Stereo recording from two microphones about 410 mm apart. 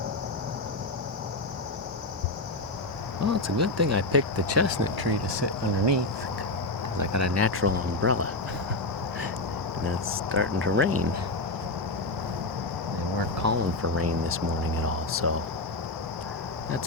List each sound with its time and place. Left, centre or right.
3.2 s speech: right
4.9 s speech: right
7.0 s speech: right
10.3 s speech: right
13.4 s speech: right